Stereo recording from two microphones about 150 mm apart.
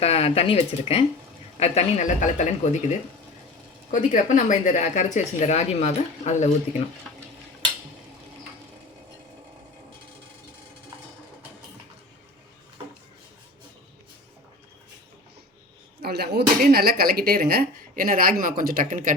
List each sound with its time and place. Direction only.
0.0 s speech: 40° left (ahead or behind)
3.9 s speech: 55° left (ahead or behind)
16.0 s speech: 90° right; by 19.1 s 60° right (ahead or behind)